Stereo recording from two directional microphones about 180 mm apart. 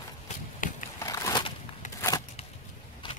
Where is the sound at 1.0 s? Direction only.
20° left (ahead or behind).